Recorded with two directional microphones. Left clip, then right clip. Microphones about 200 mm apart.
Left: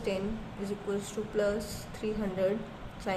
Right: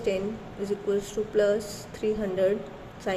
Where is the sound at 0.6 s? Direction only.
10° right (ahead or behind).